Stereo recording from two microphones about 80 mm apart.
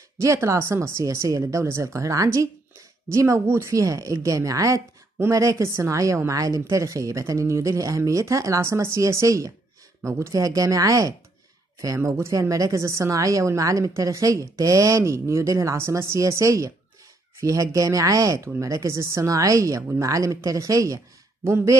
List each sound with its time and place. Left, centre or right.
0.2 s a woman's voice: right